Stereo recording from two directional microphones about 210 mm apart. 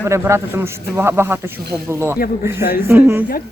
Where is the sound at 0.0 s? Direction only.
15° right (ahead or behind).